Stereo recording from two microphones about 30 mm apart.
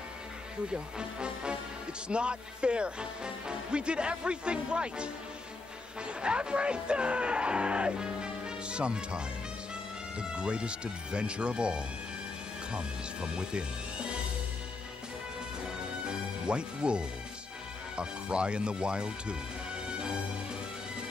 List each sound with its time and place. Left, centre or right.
0.7 s speech: right
16.1 s speech: right